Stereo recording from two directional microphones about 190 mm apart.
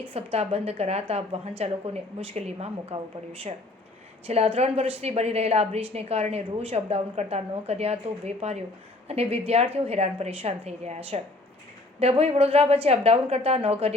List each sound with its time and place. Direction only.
0.1 s a woman's voice: 30° right (ahead or behind)
4.3 s a woman's voice: 35° right (ahead or behind)